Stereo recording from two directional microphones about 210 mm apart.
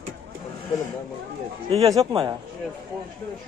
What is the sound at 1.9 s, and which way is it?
Speech, 20° right (ahead or behind).